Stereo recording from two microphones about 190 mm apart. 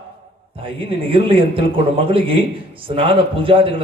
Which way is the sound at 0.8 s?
30° right (ahead or behind).